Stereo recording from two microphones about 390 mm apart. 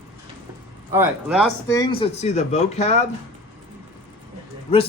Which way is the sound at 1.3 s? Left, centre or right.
Centre.